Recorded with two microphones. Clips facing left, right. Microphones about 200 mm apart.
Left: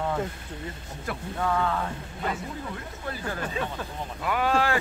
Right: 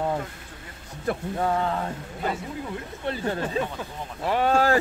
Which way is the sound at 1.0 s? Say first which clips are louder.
Right 4 dB; 30° right (ahead or behind).